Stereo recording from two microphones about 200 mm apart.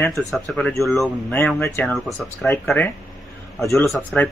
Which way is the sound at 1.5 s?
10° left (ahead or behind).